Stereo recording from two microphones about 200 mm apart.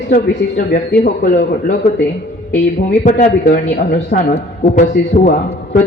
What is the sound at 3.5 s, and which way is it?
Speech, 55° left (ahead or behind).